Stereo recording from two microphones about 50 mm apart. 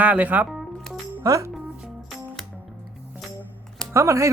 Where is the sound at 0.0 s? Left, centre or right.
Right.